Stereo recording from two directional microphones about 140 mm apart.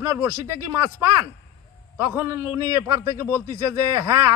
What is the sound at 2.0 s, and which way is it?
Speech, 20° right (ahead or behind).